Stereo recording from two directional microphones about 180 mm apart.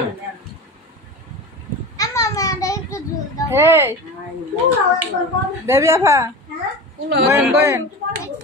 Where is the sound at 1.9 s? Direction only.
15° left (ahead or behind).